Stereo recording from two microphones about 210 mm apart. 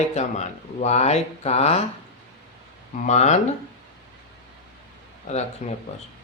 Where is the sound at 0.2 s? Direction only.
30° left (ahead or behind).